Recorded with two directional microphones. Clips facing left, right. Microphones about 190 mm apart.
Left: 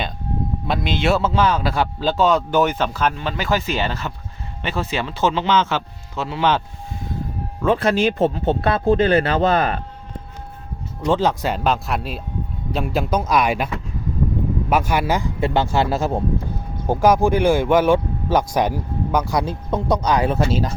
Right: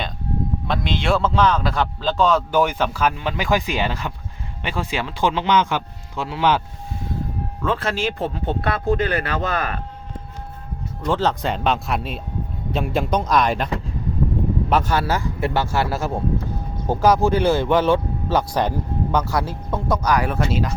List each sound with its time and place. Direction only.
0.7 s speech: 5° left (ahead or behind)
2.5 s a man's voice: 10° right (ahead or behind)
7.6 s speech: 15° left (ahead or behind)
11.0 s speech: 10° left (ahead or behind)
14.7 s speech: 10° left (ahead or behind); by 20.7 s 30° left (ahead or behind)